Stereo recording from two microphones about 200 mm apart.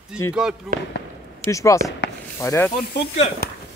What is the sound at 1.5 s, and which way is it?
Speech, 15° left (ahead or behind).